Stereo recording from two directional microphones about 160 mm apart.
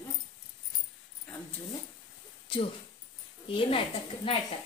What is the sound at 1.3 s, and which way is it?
Zipper, 5° left (ahead or behind).